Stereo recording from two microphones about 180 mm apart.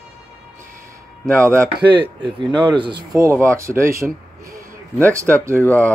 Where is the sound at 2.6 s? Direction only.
25° right (ahead or behind).